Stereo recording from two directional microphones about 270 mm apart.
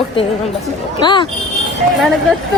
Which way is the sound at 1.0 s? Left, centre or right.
Centre.